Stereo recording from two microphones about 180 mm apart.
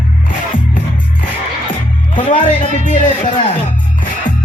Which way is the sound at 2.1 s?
45° left (ahead or behind).